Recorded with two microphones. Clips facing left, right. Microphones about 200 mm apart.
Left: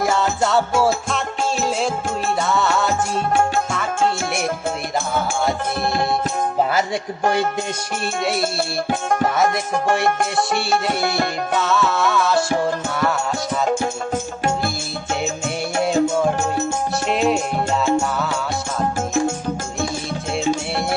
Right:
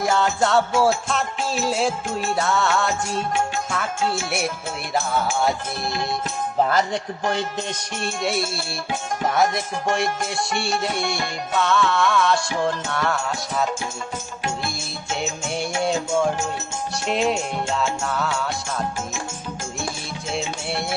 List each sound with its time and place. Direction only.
0.1 s music: centre (ahead or behind)
2.4 s music: centre (ahead or behind)
5.8 s music: 55° left (ahead or behind)
8.9 s music: 55° left (ahead or behind)
10.7 s music: 60° left (ahead or behind)
11.5 s music: centre (ahead or behind)
17.1 s music: centre (ahead or behind)